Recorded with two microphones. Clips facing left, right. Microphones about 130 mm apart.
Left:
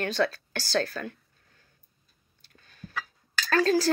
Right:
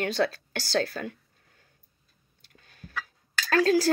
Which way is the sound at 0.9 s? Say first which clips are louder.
Right 1 dB; 55° right (ahead or behind).